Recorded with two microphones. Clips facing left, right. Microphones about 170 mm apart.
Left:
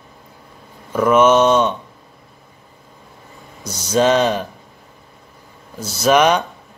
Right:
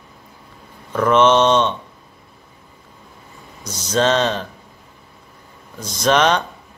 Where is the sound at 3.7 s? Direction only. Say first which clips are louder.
Left 3 dB; 10° left (ahead or behind).